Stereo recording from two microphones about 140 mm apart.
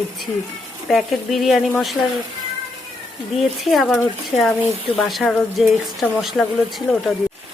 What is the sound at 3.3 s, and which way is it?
Speech, centre (ahead or behind).